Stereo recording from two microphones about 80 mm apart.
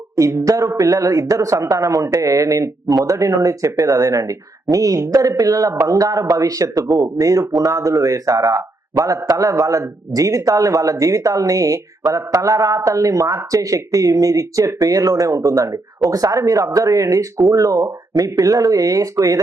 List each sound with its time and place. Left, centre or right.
0.2 s a man's voice: right